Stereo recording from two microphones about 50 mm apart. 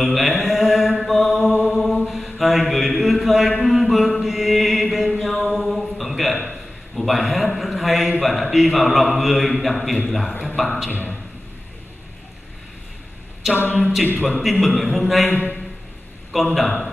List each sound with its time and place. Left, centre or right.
0.0 s mantra: centre
3.6 s chant: centre
4.9 s a sound: centre
9.6 s a man's voice: centre
13.4 s a capella: centre
14.4 s a man's voice: centre
15.2 s a man's voice: left
16.3 s a man's voice: centre